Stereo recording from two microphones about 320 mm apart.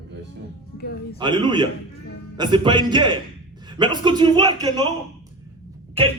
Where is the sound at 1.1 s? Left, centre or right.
Centre.